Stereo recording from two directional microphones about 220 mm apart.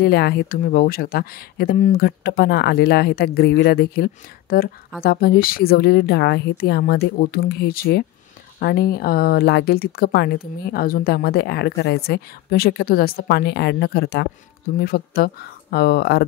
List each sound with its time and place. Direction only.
0.0 s speech: 45° left (ahead or behind)